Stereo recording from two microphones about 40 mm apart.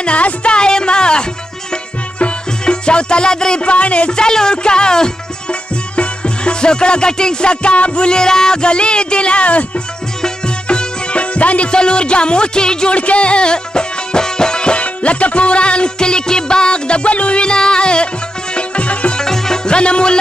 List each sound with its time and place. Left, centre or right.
0.0 s music: left
10.2 s music: left
11.7 s music: left
19.1 s music: centre